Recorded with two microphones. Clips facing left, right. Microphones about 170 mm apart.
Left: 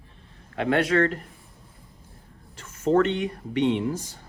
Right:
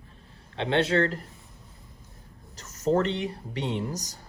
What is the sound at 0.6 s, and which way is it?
Speech, 25° right (ahead or behind).